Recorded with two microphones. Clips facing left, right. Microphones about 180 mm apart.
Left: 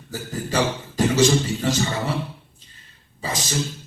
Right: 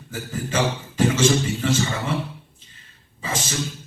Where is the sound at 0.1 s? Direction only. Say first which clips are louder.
Left 1 dB; 40° left (ahead or behind).